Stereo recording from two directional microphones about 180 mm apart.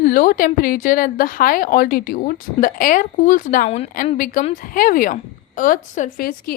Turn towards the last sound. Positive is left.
turn(degrees=55)  # may be behind; listen again after turning